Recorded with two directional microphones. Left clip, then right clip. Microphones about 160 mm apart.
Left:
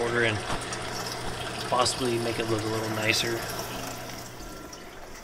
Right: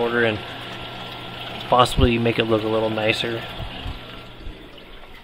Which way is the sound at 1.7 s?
60° right (ahead or behind).